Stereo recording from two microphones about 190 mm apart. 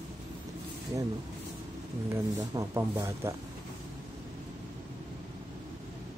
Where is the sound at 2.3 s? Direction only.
15° right (ahead or behind).